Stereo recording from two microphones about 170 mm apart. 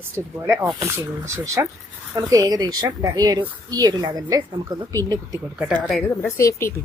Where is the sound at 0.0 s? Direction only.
15° right (ahead or behind).